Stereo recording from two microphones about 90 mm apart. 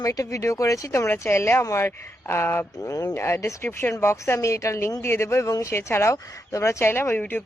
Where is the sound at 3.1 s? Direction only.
30° left (ahead or behind).